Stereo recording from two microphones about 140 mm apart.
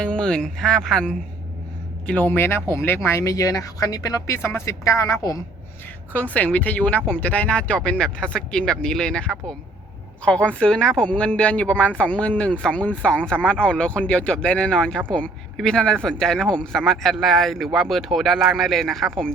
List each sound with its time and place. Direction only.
0.0 s speech: 5° left (ahead or behind); by 5.4 s 25° left (ahead or behind)
6.1 s a man's voice: 10° left (ahead or behind)